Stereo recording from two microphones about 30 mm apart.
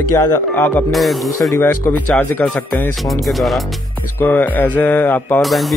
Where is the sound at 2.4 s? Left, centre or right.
Centre.